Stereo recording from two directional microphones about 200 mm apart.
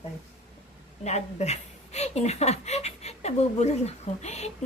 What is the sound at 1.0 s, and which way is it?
Speech, 35° left (ahead or behind).